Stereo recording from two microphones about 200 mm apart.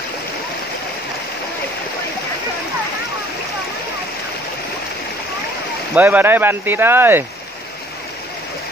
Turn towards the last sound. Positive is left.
turn(degrees=-10)  # may be behind; listen again after turning